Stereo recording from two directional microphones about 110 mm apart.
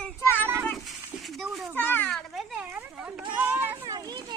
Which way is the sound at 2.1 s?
5° right (ahead or behind).